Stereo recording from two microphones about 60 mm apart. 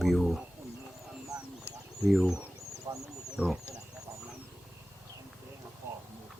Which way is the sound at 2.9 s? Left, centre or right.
Right.